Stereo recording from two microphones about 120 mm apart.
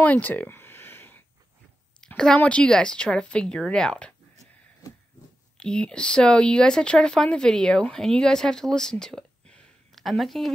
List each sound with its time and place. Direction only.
0.0 s a sound: 15° left (ahead or behind)
2.0 s speech: 5° left (ahead or behind)
5.6 s speech: 5° left (ahead or behind)